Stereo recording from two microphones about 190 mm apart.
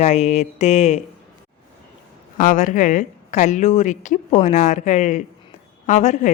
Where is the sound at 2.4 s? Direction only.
45° left (ahead or behind).